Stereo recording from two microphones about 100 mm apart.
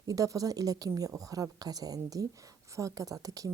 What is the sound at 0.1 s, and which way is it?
A woman's voice, 35° right (ahead or behind).